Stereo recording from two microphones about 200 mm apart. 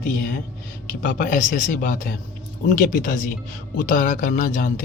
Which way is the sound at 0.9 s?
40° left (ahead or behind).